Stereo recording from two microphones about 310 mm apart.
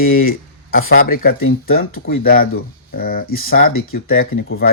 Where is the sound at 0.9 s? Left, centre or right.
Left.